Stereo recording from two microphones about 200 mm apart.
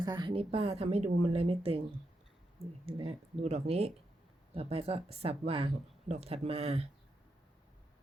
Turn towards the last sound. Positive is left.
turn(degrees=-30)  # may be behind; listen again after turning